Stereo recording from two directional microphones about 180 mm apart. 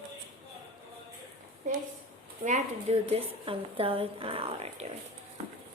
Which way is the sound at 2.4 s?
40° right (ahead or behind).